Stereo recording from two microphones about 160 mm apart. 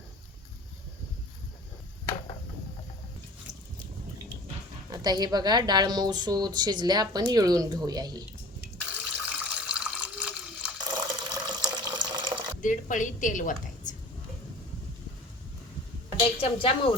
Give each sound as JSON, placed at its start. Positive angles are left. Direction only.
{"t": 4.9, "sound": "a woman's voice", "side_deg": -25}
{"t": 8.9, "sound": "water", "side_deg": -10}
{"t": 10.8, "sound": "water", "side_deg": -25}
{"t": 12.6, "sound": "a woman's voice", "side_deg": 50}
{"t": 16.4, "sound": "speech", "side_deg": 35}